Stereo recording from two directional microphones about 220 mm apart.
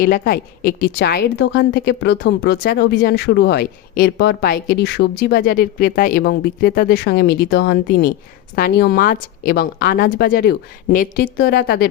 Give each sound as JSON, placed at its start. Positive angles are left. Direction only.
{"t": 0.0, "sound": "a woman's voice", "side_deg": 45}